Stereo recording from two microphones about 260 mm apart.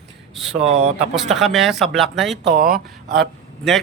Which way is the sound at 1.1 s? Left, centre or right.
Centre.